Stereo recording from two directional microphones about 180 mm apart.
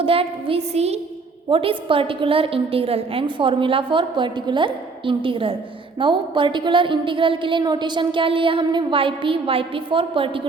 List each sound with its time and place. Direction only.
0.0 s a woman's voice: 30° right (ahead or behind)